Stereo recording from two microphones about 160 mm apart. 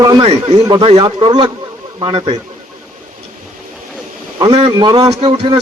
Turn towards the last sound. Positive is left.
turn(degrees=-35)  # may be behind; listen again after turning